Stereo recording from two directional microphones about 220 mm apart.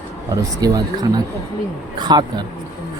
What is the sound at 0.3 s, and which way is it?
Speech, 15° right (ahead or behind).